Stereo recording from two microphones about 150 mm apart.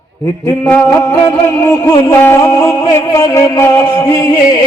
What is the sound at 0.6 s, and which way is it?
Music, 10° left (ahead or behind).